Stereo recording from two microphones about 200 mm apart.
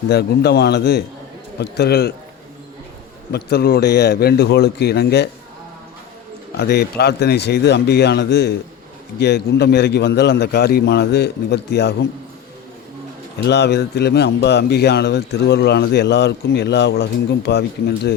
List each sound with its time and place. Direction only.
0.1 s speech: 55° left (ahead or behind)
3.3 s a man's voice: 50° left (ahead or behind)
6.6 s speech: 55° left (ahead or behind)
13.4 s speech: 60° left (ahead or behind)